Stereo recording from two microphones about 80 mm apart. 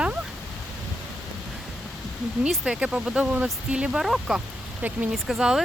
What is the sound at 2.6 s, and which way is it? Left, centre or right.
Speech, centre.